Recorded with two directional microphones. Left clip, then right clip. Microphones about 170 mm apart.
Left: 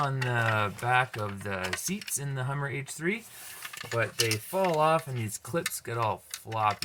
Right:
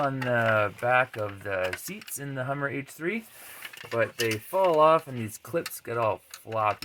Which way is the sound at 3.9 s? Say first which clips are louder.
Right 2 dB; 85° right.